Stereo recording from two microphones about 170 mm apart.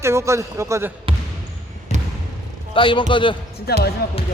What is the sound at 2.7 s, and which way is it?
Speech, 30° left (ahead or behind).